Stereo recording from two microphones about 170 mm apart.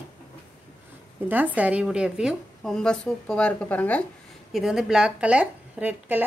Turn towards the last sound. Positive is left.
turn(degrees=-10)  # may be behind; listen again after turning